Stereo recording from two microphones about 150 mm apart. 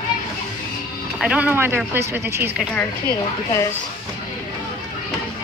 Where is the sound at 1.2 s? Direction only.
10° right (ahead or behind).